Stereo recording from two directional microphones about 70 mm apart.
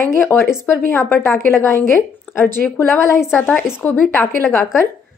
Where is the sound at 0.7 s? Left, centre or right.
Left.